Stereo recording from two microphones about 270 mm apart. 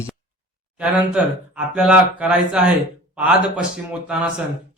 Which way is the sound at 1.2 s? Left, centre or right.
Centre.